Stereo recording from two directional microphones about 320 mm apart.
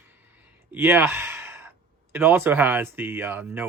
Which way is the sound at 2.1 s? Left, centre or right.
Centre.